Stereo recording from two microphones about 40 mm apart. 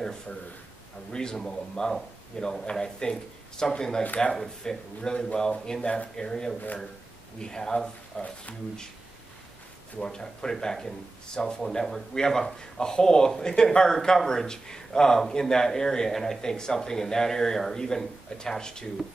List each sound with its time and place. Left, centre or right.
1.1 s speech: centre
8.2 s speech: left
10.0 s speech: centre